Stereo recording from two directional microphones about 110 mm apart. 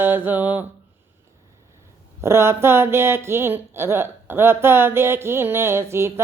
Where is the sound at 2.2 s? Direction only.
25° right (ahead or behind).